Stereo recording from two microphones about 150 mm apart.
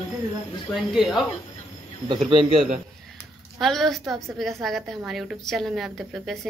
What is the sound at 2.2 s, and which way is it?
Speech, 40° right (ahead or behind).